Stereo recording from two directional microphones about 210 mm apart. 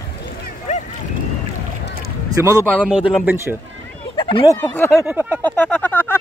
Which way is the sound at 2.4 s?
10° right (ahead or behind).